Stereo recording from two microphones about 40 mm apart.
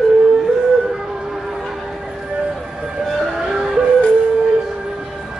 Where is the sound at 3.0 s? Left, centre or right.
Centre.